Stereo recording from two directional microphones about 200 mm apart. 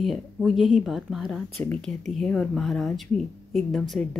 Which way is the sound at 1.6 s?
10° left (ahead or behind).